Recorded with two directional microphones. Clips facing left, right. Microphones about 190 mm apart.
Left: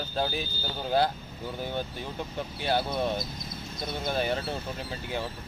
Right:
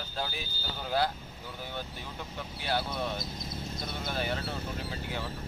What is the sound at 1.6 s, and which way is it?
Speech, 20° left (ahead or behind).